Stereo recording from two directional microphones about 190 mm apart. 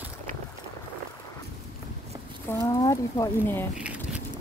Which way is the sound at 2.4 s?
15° left (ahead or behind).